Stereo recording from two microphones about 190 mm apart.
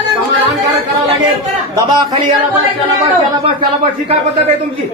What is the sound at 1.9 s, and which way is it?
Speech, 25° right (ahead or behind).